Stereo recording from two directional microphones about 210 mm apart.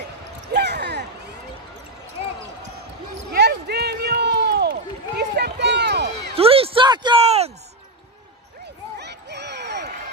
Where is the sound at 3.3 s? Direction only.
50° right (ahead or behind).